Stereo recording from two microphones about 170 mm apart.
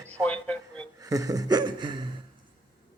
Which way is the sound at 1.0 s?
20° right (ahead or behind).